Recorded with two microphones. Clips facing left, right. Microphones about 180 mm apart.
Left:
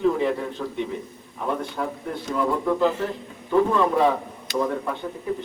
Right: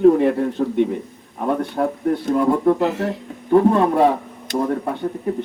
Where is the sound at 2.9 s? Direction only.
70° right (ahead or behind).